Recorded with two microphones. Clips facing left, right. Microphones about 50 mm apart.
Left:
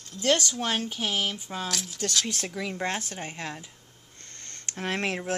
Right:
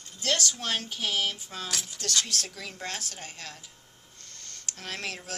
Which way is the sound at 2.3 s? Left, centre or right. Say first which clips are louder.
Left 4 dB; left.